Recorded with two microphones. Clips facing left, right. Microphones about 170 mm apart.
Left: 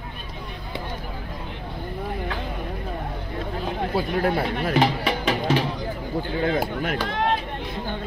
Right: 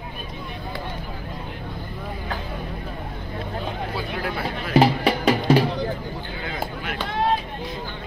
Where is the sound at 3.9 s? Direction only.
45° left (ahead or behind).